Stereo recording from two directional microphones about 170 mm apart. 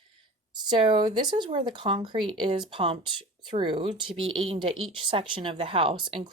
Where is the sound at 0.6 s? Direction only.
25° right (ahead or behind).